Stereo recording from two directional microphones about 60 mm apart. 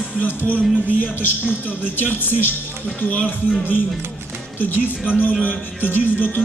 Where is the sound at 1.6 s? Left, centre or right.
Left.